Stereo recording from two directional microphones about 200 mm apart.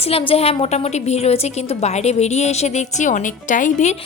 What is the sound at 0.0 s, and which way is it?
A woman's voice, 30° left (ahead or behind).